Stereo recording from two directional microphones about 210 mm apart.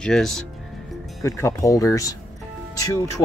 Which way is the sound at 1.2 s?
15° left (ahead or behind).